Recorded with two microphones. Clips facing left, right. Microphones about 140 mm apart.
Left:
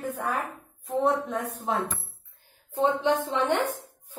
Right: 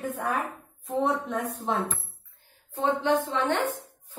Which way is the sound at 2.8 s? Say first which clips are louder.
Even; 20° left (ahead or behind).